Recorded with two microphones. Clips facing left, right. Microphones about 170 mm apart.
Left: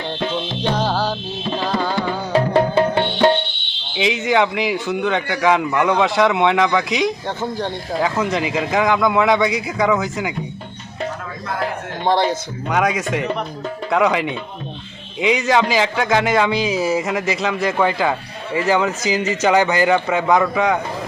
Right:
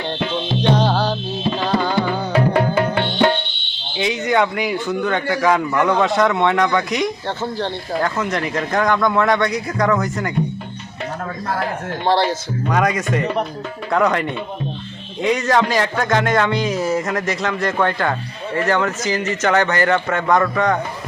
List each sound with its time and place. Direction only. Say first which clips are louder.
0.8 s music: right 2 dB; 5° left (ahead or behind)
2.3 s music: left 2 dB; 30° left (ahead or behind)
4.1 s a man's voice: even; 5° left (ahead or behind)
12.0 s speech: even; 15° left (ahead or behind)
12.6 s a man's voice: even; centre (ahead or behind)